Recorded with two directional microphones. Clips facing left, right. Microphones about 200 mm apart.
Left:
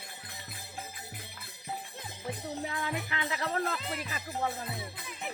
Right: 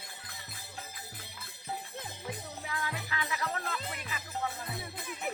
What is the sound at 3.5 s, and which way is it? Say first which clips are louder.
Music: left 5 dB; 35° left (ahead or behind).